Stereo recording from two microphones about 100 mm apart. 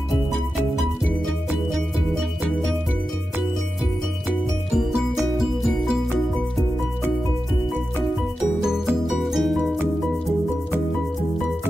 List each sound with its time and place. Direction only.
5.4 s music: 5° right (ahead or behind)
9.0 s music: centre (ahead or behind)